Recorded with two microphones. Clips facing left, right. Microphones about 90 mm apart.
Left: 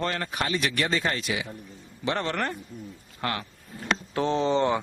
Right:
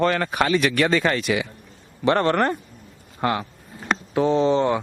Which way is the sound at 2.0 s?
55° right (ahead or behind).